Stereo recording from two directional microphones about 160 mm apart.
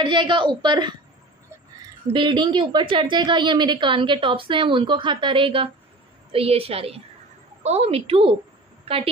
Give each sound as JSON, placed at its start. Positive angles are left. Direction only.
{"t": 0.0, "sound": "a woman's voice", "side_deg": -30}
{"t": 2.1, "sound": "a woman's voice", "side_deg": -30}